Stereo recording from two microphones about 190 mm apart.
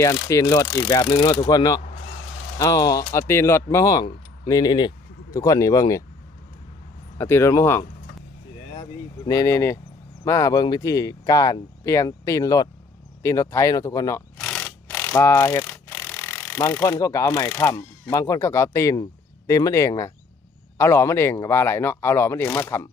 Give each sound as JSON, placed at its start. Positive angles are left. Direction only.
{"t": 0.0, "sound": "speech", "side_deg": 15}
{"t": 7.2, "sound": "speech", "side_deg": 15}
{"t": 8.8, "sound": "speech", "side_deg": 20}
{"t": 14.3, "sound": "mechanisms", "side_deg": 5}
{"t": 17.7, "sound": "speech", "side_deg": 15}